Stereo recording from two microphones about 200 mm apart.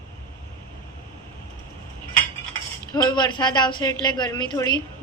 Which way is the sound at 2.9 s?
20° left (ahead or behind).